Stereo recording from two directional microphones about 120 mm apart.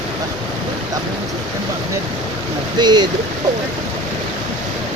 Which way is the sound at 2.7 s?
35° right (ahead or behind).